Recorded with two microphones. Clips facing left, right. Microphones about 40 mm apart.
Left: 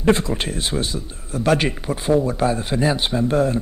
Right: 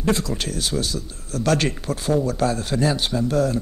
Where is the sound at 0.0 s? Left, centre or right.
Left.